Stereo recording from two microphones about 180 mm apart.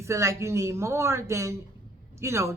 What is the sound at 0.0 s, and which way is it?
Speech, 15° right (ahead or behind).